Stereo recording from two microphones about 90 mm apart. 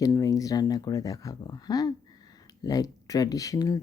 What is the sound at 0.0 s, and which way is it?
Speech, 40° left (ahead or behind).